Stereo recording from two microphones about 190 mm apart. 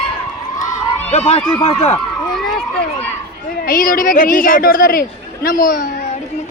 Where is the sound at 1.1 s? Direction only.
30° left (ahead or behind).